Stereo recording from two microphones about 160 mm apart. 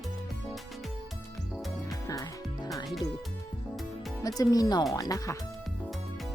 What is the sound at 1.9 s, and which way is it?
Music, 20° left (ahead or behind).